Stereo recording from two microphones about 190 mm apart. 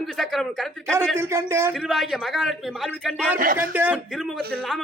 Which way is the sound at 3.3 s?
45° right (ahead or behind).